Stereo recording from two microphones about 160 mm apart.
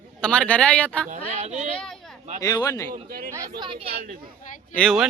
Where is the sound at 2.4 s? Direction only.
25° left (ahead or behind).